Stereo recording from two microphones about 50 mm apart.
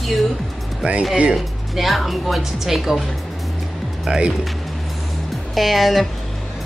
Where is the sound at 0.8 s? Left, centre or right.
Right.